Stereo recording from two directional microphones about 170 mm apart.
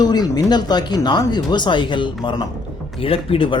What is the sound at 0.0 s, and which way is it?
Speech, 25° left (ahead or behind).